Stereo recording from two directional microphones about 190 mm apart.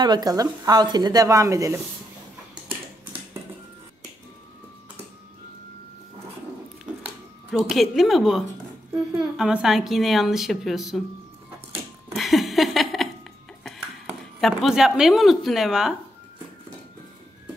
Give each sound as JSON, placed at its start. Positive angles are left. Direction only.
{"t": 0.0, "sound": "a woman's voice", "side_deg": -20}
{"t": 7.5, "sound": "a woman's voice", "side_deg": 0}
{"t": 12.1, "sound": "a sound", "side_deg": 0}
{"t": 13.7, "sound": "speech", "side_deg": 0}